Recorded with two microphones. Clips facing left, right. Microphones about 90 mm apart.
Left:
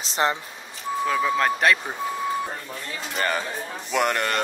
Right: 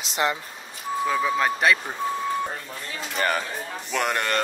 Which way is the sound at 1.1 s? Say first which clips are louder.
Left 1 dB; 5° right (ahead or behind).